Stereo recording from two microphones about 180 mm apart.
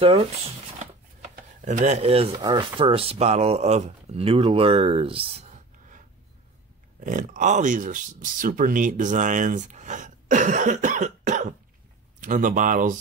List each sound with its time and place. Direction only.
1.3 s chopping: 45° right (ahead or behind)
2.4 s speech: 25° right (ahead or behind); by 12.9 s 45° right (ahead or behind)